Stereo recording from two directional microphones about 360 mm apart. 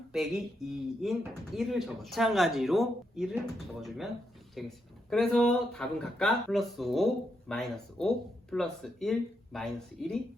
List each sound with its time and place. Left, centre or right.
0.1 s speech: centre